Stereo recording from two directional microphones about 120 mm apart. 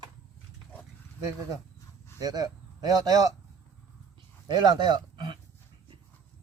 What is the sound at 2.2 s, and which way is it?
Speech, 35° right (ahead or behind).